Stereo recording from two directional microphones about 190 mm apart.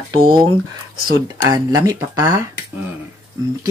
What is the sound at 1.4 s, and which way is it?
Speech, 20° right (ahead or behind).